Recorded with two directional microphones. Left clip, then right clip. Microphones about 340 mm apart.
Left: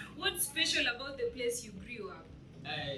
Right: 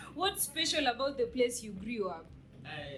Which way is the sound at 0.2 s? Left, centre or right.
Centre.